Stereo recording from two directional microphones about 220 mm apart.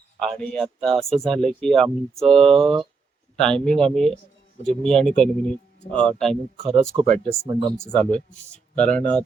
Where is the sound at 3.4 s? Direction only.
5° left (ahead or behind).